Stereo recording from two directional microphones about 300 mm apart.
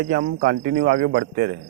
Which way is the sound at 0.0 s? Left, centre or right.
Right.